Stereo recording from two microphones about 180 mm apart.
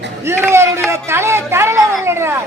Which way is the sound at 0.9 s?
15° right (ahead or behind).